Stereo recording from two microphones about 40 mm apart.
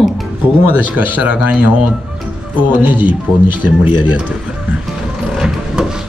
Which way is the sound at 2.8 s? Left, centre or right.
Right.